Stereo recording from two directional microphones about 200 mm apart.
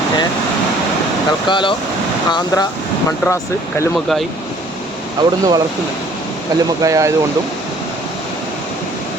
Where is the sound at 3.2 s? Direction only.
15° left (ahead or behind).